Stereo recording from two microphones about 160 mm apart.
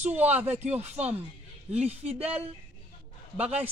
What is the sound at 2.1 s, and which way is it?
Speech, 40° right (ahead or behind).